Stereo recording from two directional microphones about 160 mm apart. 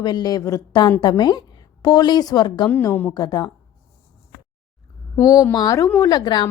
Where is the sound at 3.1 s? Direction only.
25° left (ahead or behind).